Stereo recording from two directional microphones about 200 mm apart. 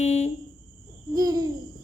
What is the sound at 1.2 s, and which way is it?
Hoot, 20° right (ahead or behind).